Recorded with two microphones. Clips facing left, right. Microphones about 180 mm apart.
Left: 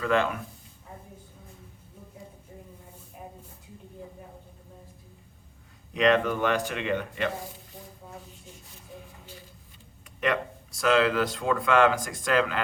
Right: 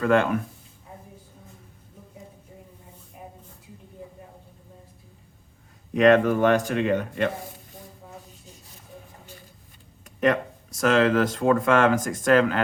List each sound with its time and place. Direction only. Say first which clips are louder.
0.0 s speech: right 5 dB; 50° right (ahead or behind)
5.9 s speech: right 6 dB; 50° right (ahead or behind)
10.2 s speech: right 5 dB; 45° right (ahead or behind)